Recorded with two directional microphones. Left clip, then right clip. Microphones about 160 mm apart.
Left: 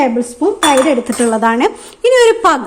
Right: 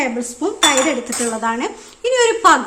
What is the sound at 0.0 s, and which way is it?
Cutlery, 35° left (ahead or behind).